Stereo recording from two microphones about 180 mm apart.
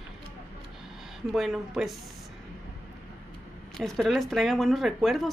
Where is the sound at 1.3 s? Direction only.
Centre (ahead or behind).